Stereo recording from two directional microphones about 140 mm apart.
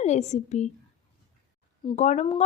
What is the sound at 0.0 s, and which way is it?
Speech, 50° left (ahead or behind).